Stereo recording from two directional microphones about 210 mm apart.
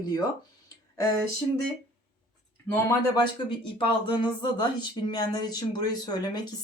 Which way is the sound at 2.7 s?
20° left (ahead or behind).